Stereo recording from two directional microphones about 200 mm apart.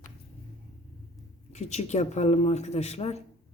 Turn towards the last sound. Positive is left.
turn(degrees=30)  # may be behind; listen again after turning